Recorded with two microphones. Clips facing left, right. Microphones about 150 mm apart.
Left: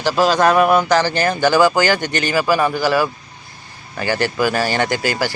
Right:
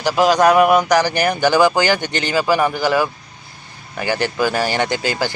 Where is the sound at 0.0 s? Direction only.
15° right (ahead or behind).